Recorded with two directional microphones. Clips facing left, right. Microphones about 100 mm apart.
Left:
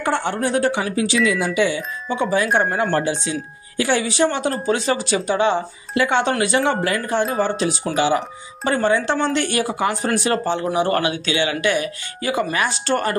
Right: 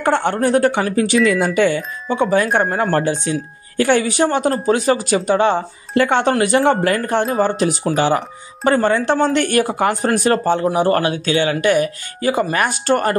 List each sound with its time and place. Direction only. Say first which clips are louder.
0.2 s speech: right 5 dB; 50° right (ahead or behind)
12.5 s speech: right 4 dB; 50° right (ahead or behind)